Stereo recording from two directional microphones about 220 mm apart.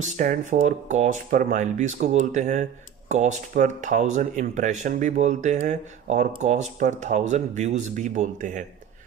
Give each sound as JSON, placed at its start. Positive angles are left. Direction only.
{"t": 0.2, "sound": "speech", "side_deg": -40}